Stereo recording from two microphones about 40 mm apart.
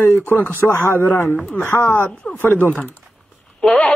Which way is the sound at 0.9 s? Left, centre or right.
Left.